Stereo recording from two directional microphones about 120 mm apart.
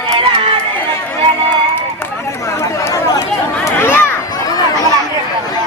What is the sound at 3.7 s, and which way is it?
Crowd, 20° left (ahead or behind).